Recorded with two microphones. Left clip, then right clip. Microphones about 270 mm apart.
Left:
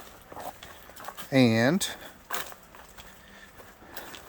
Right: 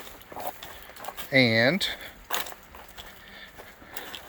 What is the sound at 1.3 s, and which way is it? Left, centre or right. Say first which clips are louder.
Speech: right 2 dB; left.